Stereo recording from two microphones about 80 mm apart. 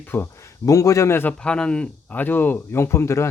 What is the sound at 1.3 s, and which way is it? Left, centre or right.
Speech, centre.